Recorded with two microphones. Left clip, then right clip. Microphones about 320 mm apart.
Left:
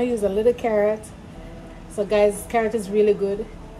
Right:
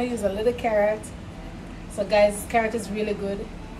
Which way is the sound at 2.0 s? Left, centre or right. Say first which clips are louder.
Left 1 dB; left.